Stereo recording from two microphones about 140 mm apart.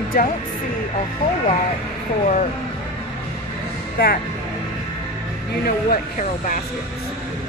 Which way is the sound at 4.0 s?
90° left.